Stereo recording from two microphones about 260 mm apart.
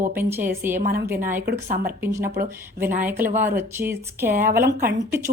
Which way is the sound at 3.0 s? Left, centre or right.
Centre.